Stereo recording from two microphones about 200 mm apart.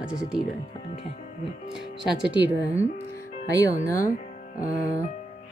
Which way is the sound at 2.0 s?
5° right (ahead or behind).